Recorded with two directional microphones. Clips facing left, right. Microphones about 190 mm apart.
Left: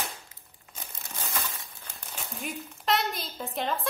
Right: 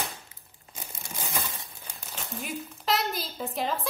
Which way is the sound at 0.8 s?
15° right (ahead or behind).